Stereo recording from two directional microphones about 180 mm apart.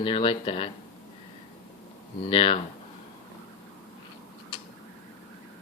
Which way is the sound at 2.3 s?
30° left (ahead or behind).